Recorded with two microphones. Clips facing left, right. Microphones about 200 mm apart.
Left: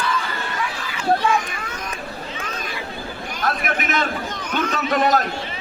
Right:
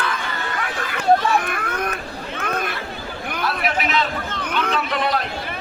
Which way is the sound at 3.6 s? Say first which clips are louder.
Right 5 dB; 50° left (ahead or behind).